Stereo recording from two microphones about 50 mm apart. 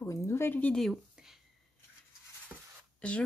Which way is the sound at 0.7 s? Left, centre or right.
Centre.